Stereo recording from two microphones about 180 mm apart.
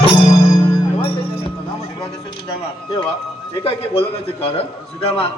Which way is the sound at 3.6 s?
35° left (ahead or behind).